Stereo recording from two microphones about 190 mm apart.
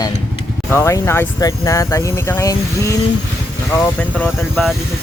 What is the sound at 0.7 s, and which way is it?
Speech, 15° left (ahead or behind).